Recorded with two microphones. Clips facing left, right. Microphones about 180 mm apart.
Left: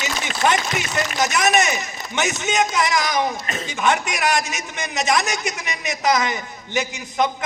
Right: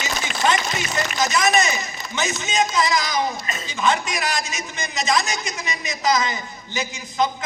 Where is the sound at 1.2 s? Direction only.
70° left (ahead or behind).